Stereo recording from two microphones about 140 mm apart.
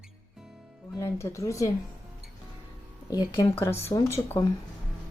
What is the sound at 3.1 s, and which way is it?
Speech, 30° left (ahead or behind).